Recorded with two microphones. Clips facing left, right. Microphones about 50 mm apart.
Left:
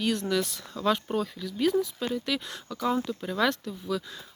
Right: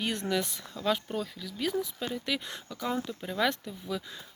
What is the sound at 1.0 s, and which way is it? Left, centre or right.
Speech, centre.